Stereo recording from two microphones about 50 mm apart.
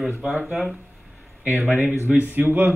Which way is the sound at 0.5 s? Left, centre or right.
Centre.